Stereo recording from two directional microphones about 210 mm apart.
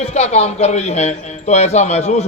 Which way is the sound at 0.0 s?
30° left (ahead or behind).